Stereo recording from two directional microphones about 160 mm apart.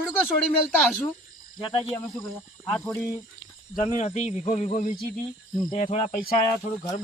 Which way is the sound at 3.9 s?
50° left (ahead or behind).